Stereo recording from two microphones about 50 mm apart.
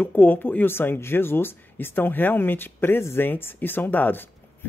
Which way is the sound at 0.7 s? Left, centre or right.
Left.